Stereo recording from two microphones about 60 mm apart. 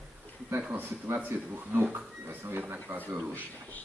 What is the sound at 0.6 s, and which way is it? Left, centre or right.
Speech, right.